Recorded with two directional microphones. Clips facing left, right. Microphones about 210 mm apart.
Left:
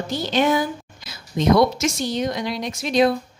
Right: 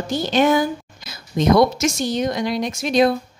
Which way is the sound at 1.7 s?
45° right (ahead or behind).